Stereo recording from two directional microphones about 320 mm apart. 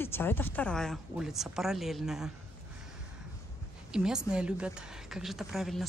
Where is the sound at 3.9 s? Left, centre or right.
Centre.